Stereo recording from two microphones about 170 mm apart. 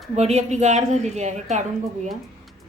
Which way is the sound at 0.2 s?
40° right (ahead or behind).